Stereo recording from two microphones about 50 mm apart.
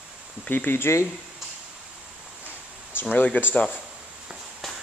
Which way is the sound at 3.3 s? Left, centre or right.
Left.